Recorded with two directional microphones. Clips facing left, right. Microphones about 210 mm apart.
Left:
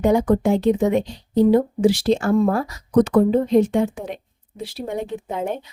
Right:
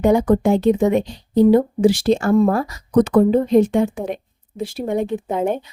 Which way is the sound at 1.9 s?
50° right (ahead or behind).